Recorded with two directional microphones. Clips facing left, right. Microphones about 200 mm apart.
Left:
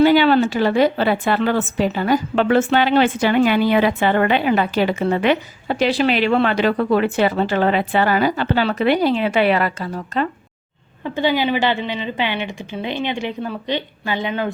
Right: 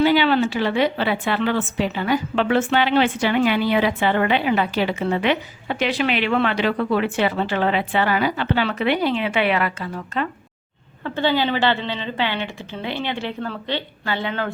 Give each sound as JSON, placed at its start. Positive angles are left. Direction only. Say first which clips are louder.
{"t": 0.0, "sound": "a woman's voice", "louder": "left 4 dB", "side_deg": 45}
{"t": 11.0, "sound": "a woman's voice", "louder": "left 2 dB", "side_deg": 15}